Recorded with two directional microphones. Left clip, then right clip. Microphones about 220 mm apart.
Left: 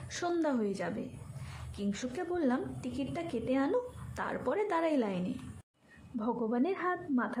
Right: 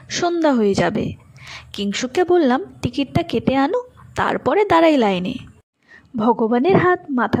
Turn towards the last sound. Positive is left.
turn(degrees=-40)  # may be behind; listen again after turning